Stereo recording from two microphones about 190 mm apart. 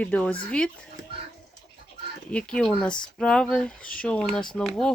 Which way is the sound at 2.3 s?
5° left (ahead or behind).